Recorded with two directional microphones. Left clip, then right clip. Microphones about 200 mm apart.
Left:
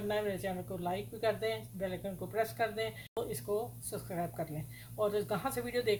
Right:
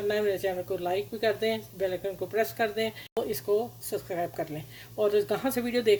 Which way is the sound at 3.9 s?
25° right (ahead or behind).